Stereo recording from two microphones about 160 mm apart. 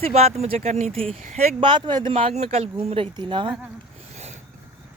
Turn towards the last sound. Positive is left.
turn(degrees=-30)  # may be behind; listen again after turning